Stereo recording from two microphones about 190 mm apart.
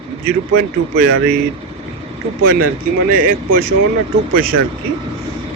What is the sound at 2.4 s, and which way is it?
A man's voice, 55° right (ahead or behind).